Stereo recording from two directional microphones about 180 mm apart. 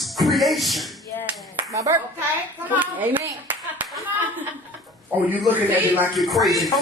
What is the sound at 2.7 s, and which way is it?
Speech, 10° right (ahead or behind).